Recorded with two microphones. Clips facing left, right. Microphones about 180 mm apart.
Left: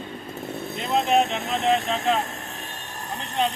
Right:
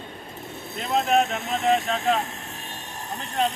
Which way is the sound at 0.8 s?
Centre (ahead or behind).